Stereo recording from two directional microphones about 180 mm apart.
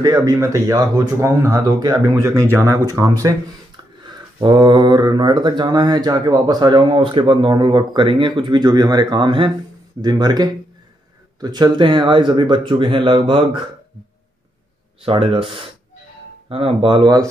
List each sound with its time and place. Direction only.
0.0 s speech: 20° right (ahead or behind)
15.0 s speech: 30° right (ahead or behind)